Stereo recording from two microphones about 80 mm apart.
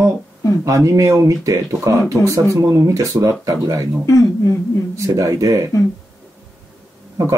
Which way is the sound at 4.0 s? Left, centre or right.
Left.